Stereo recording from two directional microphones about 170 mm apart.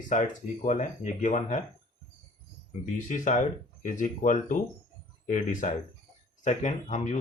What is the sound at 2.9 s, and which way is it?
Speech, 45° left (ahead or behind).